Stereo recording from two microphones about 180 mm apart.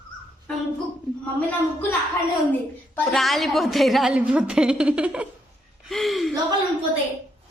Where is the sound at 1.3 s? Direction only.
10° left (ahead or behind).